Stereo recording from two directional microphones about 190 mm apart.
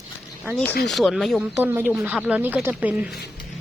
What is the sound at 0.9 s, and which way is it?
Speech, centre (ahead or behind).